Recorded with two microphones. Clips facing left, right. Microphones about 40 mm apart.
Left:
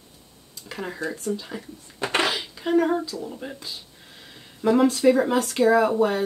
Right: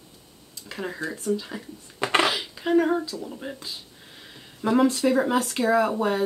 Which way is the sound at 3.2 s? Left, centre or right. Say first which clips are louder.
Left 1 dB; centre.